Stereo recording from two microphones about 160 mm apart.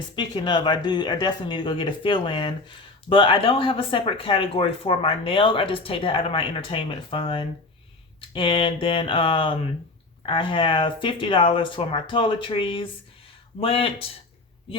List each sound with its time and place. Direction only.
0.2 s speech: 30° left (ahead or behind)